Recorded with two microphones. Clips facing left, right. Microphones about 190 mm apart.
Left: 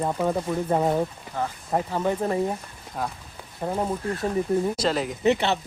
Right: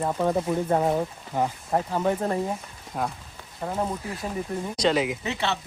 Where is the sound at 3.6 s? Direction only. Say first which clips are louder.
Left 3 dB; 15° left (ahead or behind).